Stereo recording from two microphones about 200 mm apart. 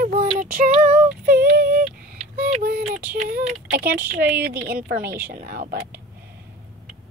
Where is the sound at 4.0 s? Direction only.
10° right (ahead or behind).